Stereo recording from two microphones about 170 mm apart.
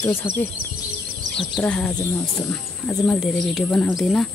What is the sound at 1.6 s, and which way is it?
Speech, 10° left (ahead or behind).